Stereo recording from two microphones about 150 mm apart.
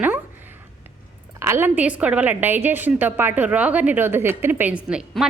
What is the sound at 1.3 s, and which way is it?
A woman's voice, 15° right (ahead or behind).